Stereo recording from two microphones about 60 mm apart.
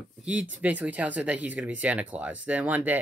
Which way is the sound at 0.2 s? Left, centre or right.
Right.